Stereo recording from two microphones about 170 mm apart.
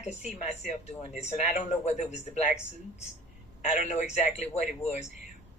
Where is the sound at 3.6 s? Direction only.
45° left (ahead or behind).